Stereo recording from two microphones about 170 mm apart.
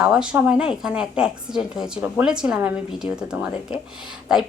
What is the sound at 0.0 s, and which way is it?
A woman's voice, 5° right (ahead or behind).